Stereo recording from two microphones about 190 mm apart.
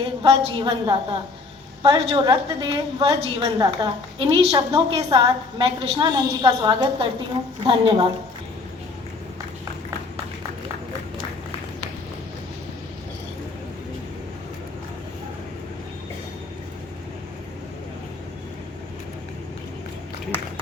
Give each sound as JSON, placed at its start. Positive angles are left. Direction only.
{"t": 0.2, "sound": "a woman's voice", "side_deg": -25}